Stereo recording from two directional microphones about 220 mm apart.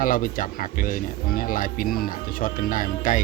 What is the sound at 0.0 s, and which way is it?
Speech, 40° left (ahead or behind).